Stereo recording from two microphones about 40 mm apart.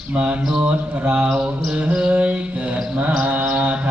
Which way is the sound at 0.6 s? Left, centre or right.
Right.